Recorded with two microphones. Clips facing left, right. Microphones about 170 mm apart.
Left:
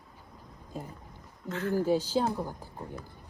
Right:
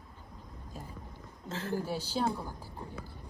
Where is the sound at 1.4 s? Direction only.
30° right (ahead or behind).